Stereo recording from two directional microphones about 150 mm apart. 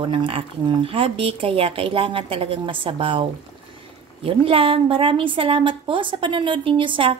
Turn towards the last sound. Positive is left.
turn(degrees=-35)  # may be behind; listen again after turning